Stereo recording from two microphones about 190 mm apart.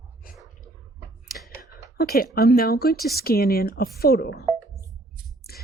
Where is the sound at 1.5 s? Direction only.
15° right (ahead or behind).